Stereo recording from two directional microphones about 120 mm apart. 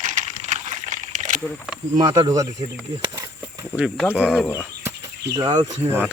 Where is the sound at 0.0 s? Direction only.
90° right.